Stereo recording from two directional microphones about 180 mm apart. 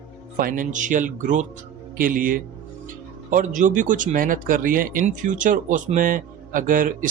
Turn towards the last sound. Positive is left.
turn(degrees=-50)  # may be behind; listen again after turning